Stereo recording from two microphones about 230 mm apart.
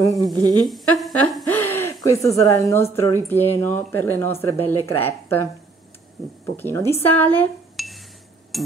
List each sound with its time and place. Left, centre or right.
0.2 s speech: centre
0.7 s speech: centre
6.5 s speech: centre
8.5 s a sound: centre